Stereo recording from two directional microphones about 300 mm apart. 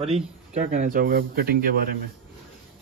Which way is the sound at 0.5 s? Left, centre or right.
Right.